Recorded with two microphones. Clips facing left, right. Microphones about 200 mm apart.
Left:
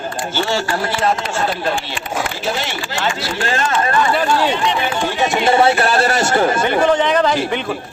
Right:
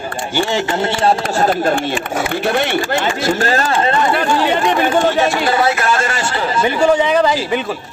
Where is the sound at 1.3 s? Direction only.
45° right (ahead or behind).